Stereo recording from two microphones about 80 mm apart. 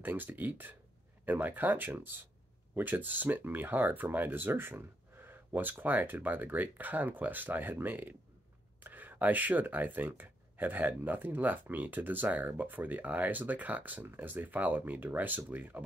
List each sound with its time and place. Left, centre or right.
0.0 s speech: right